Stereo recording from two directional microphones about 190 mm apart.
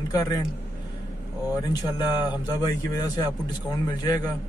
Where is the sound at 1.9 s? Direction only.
20° left (ahead or behind).